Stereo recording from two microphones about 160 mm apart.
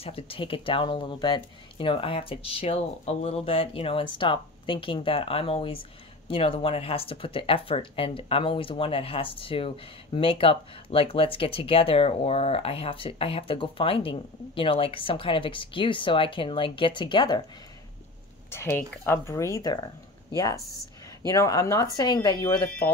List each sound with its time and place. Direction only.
0.0 s speech: 35° left (ahead or behind)
18.5 s speech: 15° left (ahead or behind)